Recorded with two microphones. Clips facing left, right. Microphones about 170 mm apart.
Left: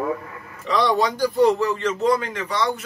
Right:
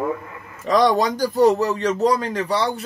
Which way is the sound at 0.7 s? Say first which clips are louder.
Right 3 dB; 45° right (ahead or behind).